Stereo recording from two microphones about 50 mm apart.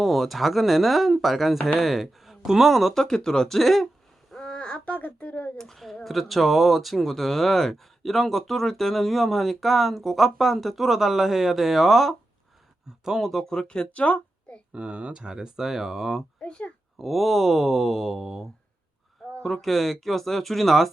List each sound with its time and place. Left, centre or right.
0.0 s speech: centre
2.9 s speech: centre
4.4 s speech: left
5.5 s speech: centre
13.4 s speech: centre
14.7 s speech: right; by 16.2 s centre
16.4 s a child's voice: left
17.0 s speech: centre
19.2 s a sound: centre
19.6 s speech: centre